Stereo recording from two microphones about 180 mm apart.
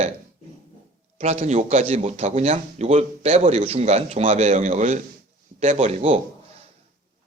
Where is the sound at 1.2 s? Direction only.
35° right (ahead or behind).